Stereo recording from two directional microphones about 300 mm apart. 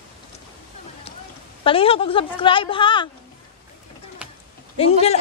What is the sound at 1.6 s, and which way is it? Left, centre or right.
A woman's voice, centre.